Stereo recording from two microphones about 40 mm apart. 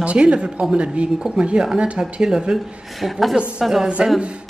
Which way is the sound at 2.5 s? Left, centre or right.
Centre.